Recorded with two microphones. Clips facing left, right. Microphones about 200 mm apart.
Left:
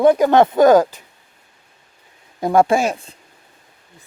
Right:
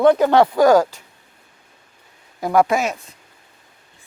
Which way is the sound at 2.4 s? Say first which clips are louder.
Left 2 dB; 25° left (ahead or behind).